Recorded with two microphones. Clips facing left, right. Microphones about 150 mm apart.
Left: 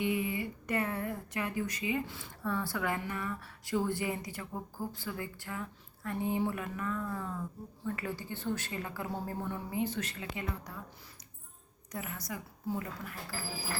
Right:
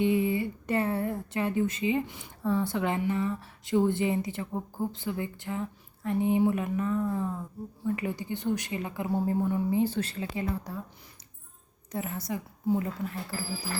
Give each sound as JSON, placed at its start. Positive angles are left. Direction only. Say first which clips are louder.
{"t": 0.0, "sound": "a woman's voice", "louder": "right 7 dB", "side_deg": -30}
{"t": 9.7, "sound": "speech", "louder": "right 7 dB", "side_deg": -30}
{"t": 11.9, "sound": "a woman's voice", "louder": "right 7 dB", "side_deg": -25}